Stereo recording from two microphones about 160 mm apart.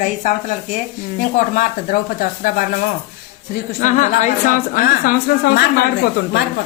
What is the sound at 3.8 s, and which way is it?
A woman's voice, 50° left (ahead or behind).